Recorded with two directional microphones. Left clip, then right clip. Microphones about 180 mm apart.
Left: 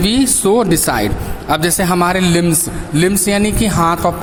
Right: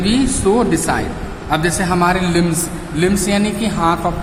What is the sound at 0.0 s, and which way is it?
A man's voice, 55° left (ahead or behind).